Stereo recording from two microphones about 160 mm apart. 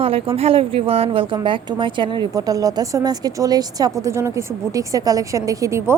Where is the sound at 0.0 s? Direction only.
35° right (ahead or behind).